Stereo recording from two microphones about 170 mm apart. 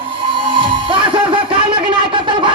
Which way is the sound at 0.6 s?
30° right (ahead or behind).